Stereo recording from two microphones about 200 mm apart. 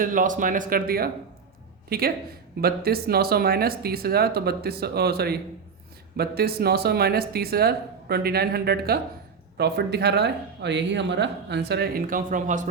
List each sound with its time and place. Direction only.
0.0 s a man's voice: 40° right (ahead or behind)